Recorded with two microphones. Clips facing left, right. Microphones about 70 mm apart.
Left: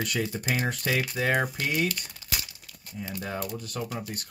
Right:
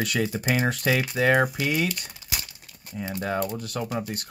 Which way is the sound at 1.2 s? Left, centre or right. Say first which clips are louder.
Right 6 dB; right.